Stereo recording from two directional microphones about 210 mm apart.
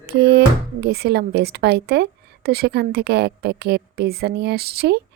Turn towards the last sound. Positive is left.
turn(degrees=-50)  # may be behind; listen again after turning